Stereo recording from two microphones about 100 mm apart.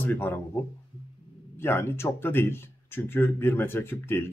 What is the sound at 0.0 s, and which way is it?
Speech, 25° left (ahead or behind).